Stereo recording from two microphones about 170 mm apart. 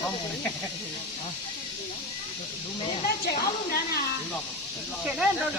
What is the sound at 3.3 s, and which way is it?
Speech, 60° left (ahead or behind).